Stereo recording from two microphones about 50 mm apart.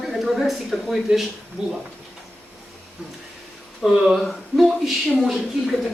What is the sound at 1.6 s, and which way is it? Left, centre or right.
Speech, centre.